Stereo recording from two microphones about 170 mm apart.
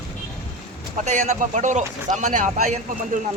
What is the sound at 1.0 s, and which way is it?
Speech, 45° right (ahead or behind).